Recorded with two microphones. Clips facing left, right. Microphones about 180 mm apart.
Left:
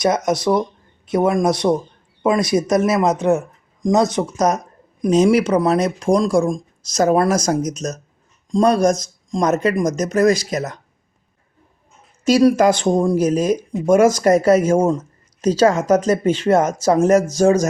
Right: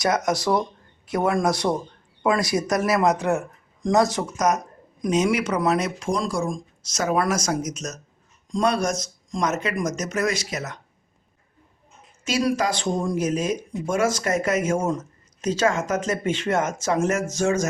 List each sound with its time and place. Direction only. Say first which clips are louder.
0.0 s speech: left 5 dB; 20° left (ahead or behind); by 10.8 s 35° left (ahead or behind)
12.2 s speech: left 10 dB; 40° left (ahead or behind)
13.1 s speech: left 7 dB; 35° left (ahead or behind)